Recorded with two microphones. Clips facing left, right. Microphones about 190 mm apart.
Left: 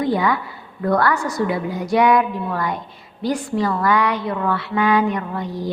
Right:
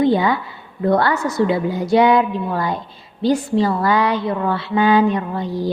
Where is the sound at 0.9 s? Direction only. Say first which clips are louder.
Right 2 dB; 25° right (ahead or behind).